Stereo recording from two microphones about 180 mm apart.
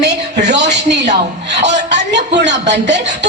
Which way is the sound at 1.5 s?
40° right (ahead or behind).